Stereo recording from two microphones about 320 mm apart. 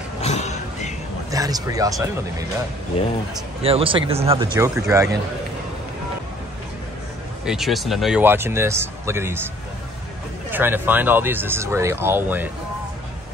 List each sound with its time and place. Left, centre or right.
0.2 s a sound: left
1.3 s speech: centre
3.6 s speech: centre
7.4 s speech: centre
10.5 s speech: centre